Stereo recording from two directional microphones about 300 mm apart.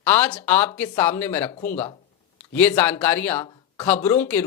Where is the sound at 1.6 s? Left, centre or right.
Left.